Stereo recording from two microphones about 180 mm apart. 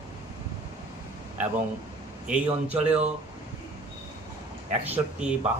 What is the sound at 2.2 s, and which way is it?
Speech, 5° right (ahead or behind).